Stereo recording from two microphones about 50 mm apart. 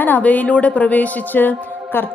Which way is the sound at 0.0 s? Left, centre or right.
Left.